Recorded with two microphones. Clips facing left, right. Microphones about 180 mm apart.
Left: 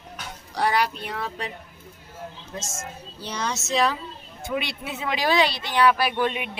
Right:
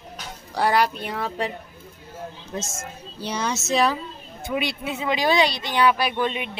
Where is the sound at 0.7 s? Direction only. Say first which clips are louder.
Right 3 dB; 55° right (ahead or behind).